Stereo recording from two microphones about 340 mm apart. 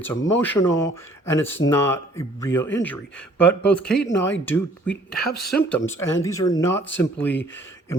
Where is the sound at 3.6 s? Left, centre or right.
Centre.